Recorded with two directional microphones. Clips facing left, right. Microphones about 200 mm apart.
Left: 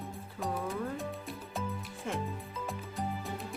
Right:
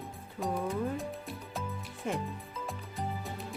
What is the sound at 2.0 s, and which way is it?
Speech, 20° right (ahead or behind).